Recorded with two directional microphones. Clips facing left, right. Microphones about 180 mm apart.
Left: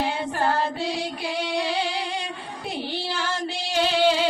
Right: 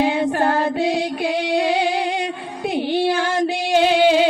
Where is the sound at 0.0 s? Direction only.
55° right (ahead or behind).